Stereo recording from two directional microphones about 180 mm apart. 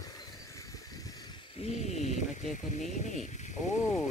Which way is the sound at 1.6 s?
40° left (ahead or behind).